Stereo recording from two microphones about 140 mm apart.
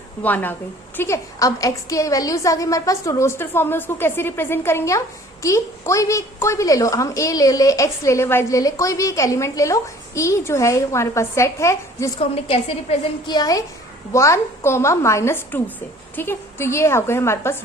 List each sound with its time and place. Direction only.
0.2 s a woman's voice: 10° left (ahead or behind)
12.2 s a woman's voice: 45° left (ahead or behind)
13.2 s a woman's voice: 30° left (ahead or behind)